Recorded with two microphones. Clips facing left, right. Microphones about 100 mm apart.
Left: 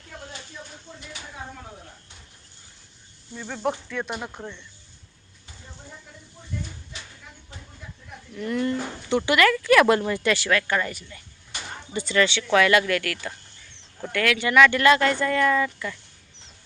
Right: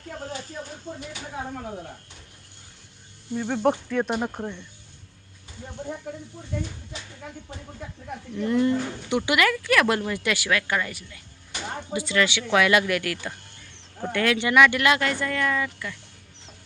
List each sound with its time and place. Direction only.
0.2 s a sound: 45° right (ahead or behind)
3.3 s speech: 20° right (ahead or behind)
4.0 s speech: 35° right (ahead or behind)
8.4 s speech: 20° right (ahead or behind)
9.6 s a woman's voice: centre (ahead or behind)